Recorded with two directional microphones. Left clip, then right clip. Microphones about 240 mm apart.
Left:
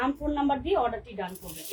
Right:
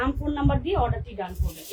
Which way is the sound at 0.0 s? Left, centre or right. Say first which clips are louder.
Right 1 dB; centre.